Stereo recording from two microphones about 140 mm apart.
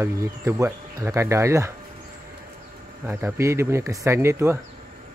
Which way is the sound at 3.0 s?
20° right (ahead or behind).